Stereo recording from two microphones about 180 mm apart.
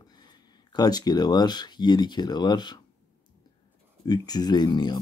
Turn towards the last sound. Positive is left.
turn(degrees=25)  # may be behind; listen again after turning